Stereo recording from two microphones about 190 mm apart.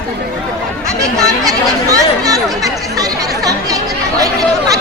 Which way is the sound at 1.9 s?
20° right (ahead or behind).